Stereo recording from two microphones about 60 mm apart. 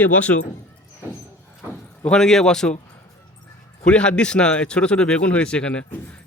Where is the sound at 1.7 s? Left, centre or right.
Centre.